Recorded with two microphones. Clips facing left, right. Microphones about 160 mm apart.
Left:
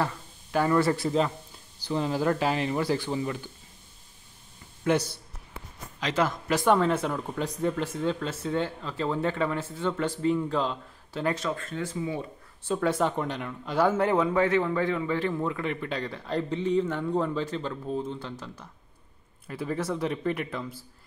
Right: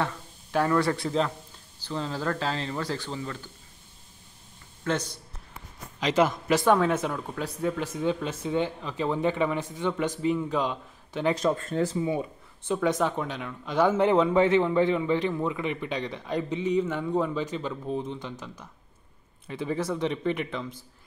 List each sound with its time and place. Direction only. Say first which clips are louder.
0.0 s speech: left 1 dB; centre (ahead or behind)
1.9 s speech: left 4 dB; 15° left (ahead or behind)
4.9 s speech: left 4 dB; 10° left (ahead or behind)
5.9 s a man's voice: right 3 dB; 15° right (ahead or behind)
11.6 s speech: right 5 dB; 40° right (ahead or behind)
12.1 s speech: right 4 dB; 15° right (ahead or behind)
12.9 s speech: left 1 dB; 10° left (ahead or behind)
13.9 s a man's voice: right 3 dB; 20° right (ahead or behind)
19.4 s speech: right 1 dB; centre (ahead or behind)